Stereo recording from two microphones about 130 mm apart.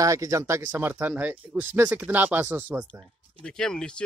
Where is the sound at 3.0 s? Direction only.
5° left (ahead or behind).